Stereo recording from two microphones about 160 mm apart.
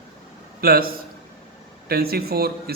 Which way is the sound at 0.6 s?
70° right (ahead or behind).